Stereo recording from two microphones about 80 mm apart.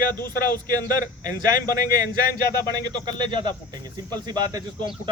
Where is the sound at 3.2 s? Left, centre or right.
Right.